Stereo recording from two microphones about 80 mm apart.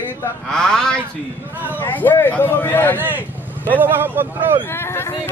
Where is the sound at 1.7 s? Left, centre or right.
Left.